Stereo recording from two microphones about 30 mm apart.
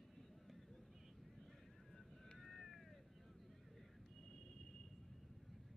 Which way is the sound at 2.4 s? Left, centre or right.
Centre.